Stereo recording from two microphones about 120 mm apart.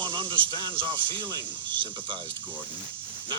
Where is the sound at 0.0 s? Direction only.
45° right (ahead or behind).